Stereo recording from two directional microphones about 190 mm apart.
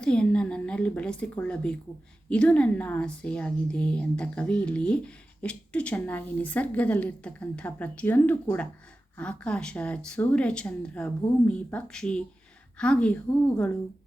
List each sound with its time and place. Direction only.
0.0 s a woman's voice: 5° left (ahead or behind)